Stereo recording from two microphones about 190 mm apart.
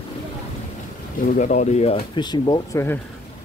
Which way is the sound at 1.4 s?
40° left (ahead or behind).